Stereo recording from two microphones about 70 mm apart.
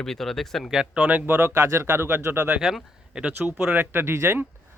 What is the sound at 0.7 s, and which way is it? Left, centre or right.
Speech, centre.